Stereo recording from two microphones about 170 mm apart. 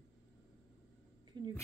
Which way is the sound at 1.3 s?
30° right (ahead or behind).